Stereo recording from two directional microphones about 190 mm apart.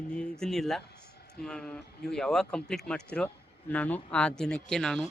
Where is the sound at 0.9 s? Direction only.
60° left (ahead or behind).